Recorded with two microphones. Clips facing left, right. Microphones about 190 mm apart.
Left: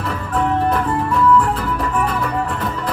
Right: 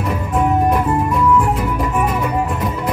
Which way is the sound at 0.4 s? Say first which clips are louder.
Right 2 dB; 10° right (ahead or behind).